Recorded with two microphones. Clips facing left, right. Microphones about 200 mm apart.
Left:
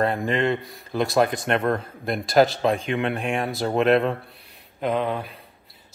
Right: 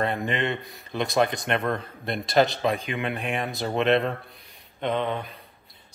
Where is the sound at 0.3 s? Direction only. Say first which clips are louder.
Left 5 dB; 45° left (ahead or behind).